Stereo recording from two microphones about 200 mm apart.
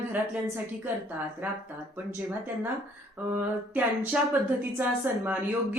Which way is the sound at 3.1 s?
10° right (ahead or behind).